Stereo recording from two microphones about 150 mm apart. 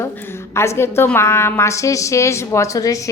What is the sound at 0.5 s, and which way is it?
A woman's voice, 20° left (ahead or behind).